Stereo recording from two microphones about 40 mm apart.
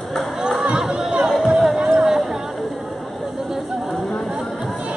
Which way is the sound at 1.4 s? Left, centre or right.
Centre.